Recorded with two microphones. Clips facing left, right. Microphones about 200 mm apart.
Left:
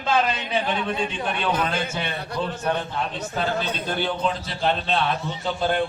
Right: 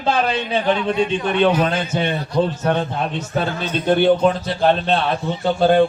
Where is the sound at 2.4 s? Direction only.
55° right (ahead or behind).